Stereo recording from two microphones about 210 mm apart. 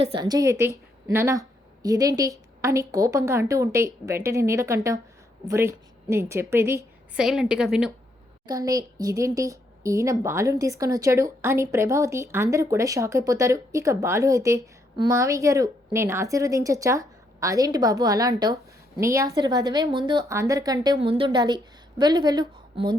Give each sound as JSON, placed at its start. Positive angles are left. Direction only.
{"t": 0.0, "sound": "speech", "side_deg": -25}
{"t": 8.4, "sound": "speech", "side_deg": -15}